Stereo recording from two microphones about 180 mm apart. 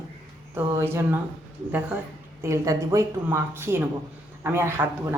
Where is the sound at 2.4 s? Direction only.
15° right (ahead or behind).